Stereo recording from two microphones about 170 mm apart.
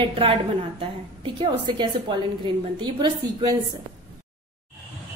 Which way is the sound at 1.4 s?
25° right (ahead or behind).